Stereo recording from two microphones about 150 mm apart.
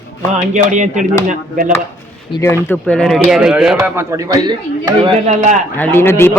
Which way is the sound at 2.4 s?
15° left (ahead or behind).